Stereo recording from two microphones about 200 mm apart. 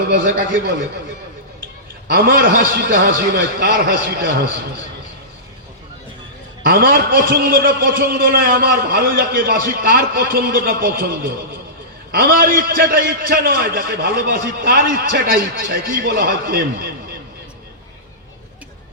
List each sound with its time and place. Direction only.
0.1 s a man's voice: 45° right (ahead or behind)
2.0 s a man's voice: 45° right (ahead or behind)
6.7 s a man's voice: 45° right (ahead or behind)